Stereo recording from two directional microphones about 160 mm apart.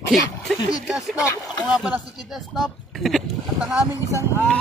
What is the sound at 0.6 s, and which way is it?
Speech, 25° left (ahead or behind).